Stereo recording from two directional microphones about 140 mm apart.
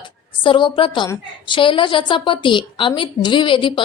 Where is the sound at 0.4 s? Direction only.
35° left (ahead or behind).